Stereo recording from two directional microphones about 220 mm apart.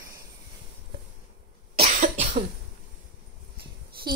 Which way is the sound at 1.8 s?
30° right (ahead or behind).